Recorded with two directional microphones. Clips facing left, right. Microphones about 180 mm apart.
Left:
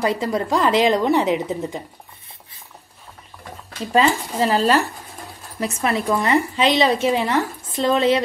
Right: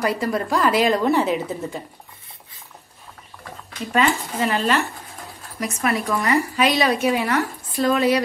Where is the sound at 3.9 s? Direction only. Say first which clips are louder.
Left 3 dB; 30° left (ahead or behind).